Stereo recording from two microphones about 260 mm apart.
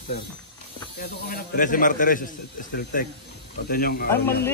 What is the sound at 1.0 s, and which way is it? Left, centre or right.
A man's voice, left.